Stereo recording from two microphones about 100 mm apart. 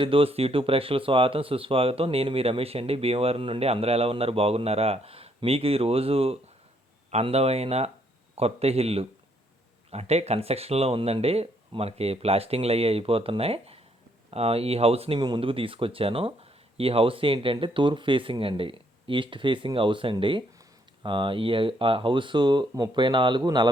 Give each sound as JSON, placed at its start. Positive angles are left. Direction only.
{"t": 0.0, "sound": "speech", "side_deg": -65}
{"t": 7.1, "sound": "speech", "side_deg": -90}
{"t": 15.4, "sound": "a man's voice", "side_deg": -60}